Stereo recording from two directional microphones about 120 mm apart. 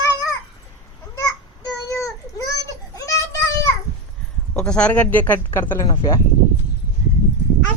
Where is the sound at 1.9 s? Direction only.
25° left (ahead or behind).